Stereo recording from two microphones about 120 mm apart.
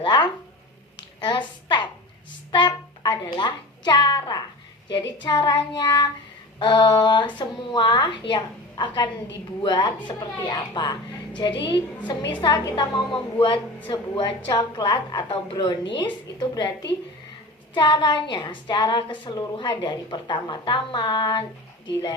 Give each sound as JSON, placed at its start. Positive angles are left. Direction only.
{"t": 0.0, "sound": "a woman's voice", "side_deg": 40}
{"t": 2.5, "sound": "a sound", "side_deg": 40}
{"t": 4.9, "sound": "a woman's voice", "side_deg": 40}
{"t": 17.7, "sound": "a woman's voice", "side_deg": 40}